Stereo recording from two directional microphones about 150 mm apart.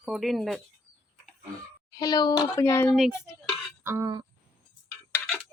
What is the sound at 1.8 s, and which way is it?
A woman's voice, 25° left (ahead or behind).